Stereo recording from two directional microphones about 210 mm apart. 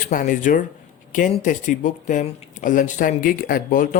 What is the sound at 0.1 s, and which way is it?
Speech, 40° left (ahead or behind).